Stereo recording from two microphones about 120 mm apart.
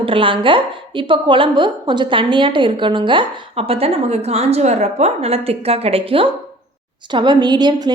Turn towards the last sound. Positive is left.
turn(degrees=-35)  # may be behind; listen again after turning